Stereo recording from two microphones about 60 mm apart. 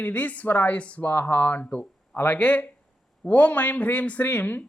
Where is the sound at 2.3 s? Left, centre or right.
Left.